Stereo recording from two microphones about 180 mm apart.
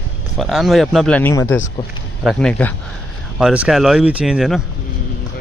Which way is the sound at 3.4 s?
5° right (ahead or behind).